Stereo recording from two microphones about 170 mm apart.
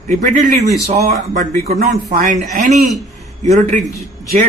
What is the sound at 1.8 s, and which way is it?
Speech, 55° right (ahead or behind).